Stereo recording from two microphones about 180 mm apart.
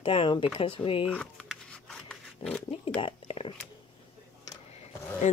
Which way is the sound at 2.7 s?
30° left (ahead or behind).